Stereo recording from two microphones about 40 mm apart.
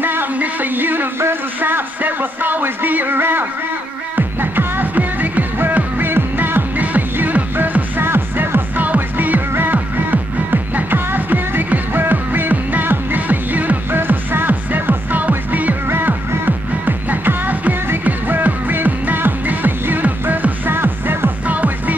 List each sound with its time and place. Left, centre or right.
0.0 s music: right
1.6 s speech: right
4.4 s music: right
5.9 s music: right
8.0 s music: right
8.8 s music: right
13.9 s music: right
20.7 s music: right
21.5 s music: right